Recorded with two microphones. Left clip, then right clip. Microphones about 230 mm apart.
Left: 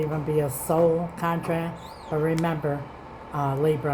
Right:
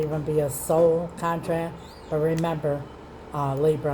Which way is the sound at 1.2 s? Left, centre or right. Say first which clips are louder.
Right 1 dB; left.